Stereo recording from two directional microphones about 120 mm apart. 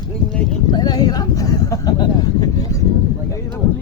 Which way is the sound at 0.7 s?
35° left (ahead or behind).